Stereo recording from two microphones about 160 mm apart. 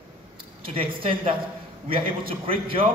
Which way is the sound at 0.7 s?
35° right (ahead or behind).